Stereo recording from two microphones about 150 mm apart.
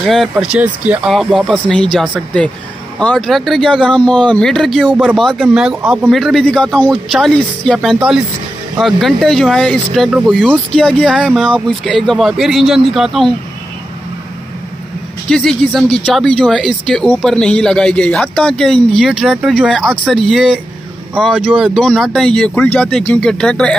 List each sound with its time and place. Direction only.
0.0 s speech: centre (ahead or behind)
15.2 s speech: 5° left (ahead or behind)